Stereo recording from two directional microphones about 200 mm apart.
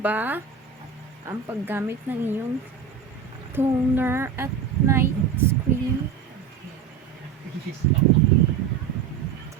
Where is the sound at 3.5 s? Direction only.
10° right (ahead or behind).